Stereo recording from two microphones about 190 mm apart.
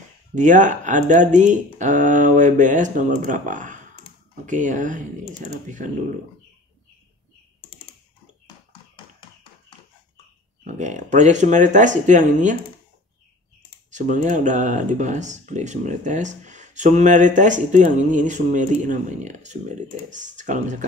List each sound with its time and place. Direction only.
0.3 s speech: 40° right (ahead or behind)
10.6 s speech: 40° right (ahead or behind)
13.8 s speech: 40° right (ahead or behind)